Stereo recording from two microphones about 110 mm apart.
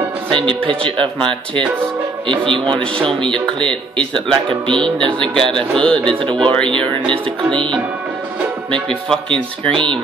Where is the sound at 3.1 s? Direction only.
5° left (ahead or behind).